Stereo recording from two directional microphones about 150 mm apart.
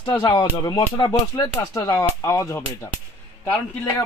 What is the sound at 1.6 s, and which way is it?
A man's voice, 20° left (ahead or behind).